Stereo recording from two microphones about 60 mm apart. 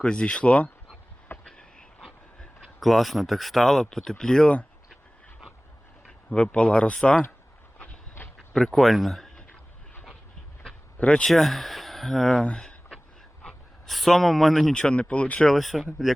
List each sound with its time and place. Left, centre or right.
0.0 s speech: centre
1.5 s a sound: centre
2.0 s dog: centre
2.8 s speech: centre
6.1 s speech: centre
7.8 s a sound: left
8.4 s speech: centre
10.6 s a sound: centre
11.3 s speech: centre
13.4 s a sound: centre
13.9 s speech: centre; by 15.4 s left
15.4 s speech: centre